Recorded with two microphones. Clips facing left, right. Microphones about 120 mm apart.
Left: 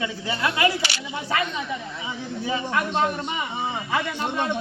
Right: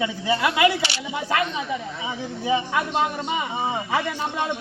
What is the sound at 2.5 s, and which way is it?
Speech, 15° right (ahead or behind).